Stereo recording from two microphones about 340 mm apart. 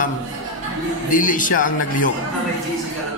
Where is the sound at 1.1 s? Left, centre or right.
Left.